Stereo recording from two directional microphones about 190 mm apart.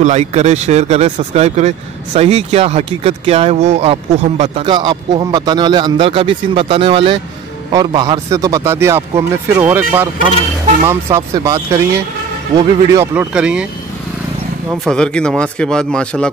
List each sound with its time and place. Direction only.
0.0 s speech: 35° right (ahead or behind)
4.6 s speech: 25° right (ahead or behind)
12.5 s speech: 15° right (ahead or behind)
14.9 s a man's voice: 5° left (ahead or behind)